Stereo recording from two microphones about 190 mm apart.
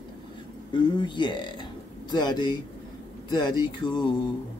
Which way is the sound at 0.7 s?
25° left (ahead or behind).